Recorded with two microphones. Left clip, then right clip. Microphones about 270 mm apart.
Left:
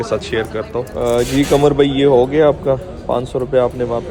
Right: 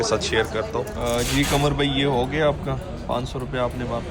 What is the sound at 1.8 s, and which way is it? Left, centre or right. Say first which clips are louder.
Speech: left 10 dB; centre.